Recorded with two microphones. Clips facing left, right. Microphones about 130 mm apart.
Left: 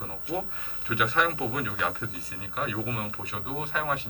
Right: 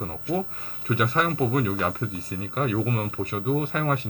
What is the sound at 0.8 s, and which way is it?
Speech, 40° right (ahead or behind).